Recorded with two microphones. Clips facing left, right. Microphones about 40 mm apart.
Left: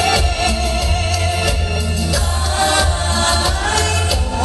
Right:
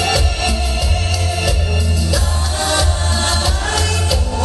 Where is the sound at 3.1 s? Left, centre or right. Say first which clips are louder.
Left 2 dB; centre.